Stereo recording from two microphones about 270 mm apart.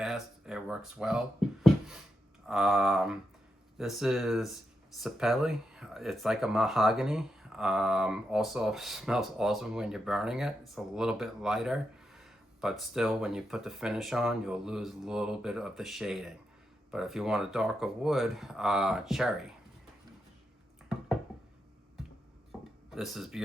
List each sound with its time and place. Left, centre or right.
0.0 s speech: centre
22.5 s a sound: centre
22.9 s speech: centre